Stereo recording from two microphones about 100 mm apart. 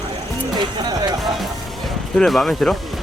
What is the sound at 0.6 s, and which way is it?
Music, 45° right (ahead or behind).